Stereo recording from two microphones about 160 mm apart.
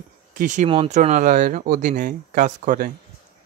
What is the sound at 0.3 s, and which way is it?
Speech, 55° right (ahead or behind).